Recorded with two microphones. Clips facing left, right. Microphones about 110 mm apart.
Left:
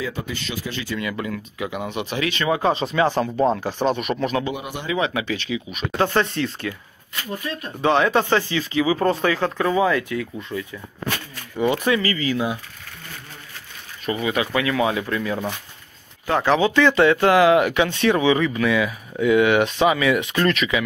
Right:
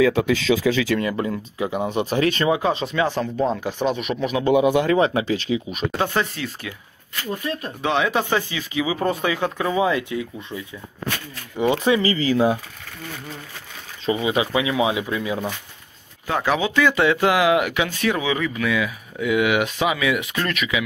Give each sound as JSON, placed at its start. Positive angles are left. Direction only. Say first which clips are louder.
{"t": 0.0, "sound": "speech", "louder": "right 11 dB", "side_deg": -90}
{"t": 0.9, "sound": "speech", "louder": "right 4 dB", "side_deg": -35}
{"t": 2.6, "sound": "speech", "louder": "left 2 dB", "side_deg": 0}
{"t": 4.9, "sound": "speech", "louder": "right 4 dB", "side_deg": -35}
{"t": 5.9, "sound": "speech", "louder": "left 3 dB", "side_deg": -5}
{"t": 7.8, "sound": "speech", "louder": "left 3 dB", "side_deg": 0}
{"t": 10.5, "sound": "speech", "louder": "left 5 dB", "side_deg": -10}
{"t": 11.5, "sound": "speech", "louder": "right 1 dB", "side_deg": -20}
{"t": 14.0, "sound": "speech", "louder": "right 2 dB", "side_deg": -20}